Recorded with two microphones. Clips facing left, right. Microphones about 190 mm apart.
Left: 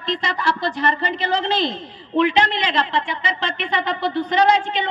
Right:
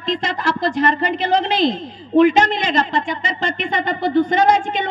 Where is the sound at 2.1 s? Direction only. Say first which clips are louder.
Right 5 dB; 45° right (ahead or behind).